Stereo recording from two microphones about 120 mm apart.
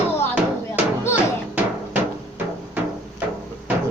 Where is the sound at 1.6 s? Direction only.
15° right (ahead or behind).